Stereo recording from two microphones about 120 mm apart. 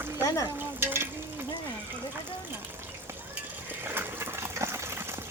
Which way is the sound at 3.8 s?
20° right (ahead or behind).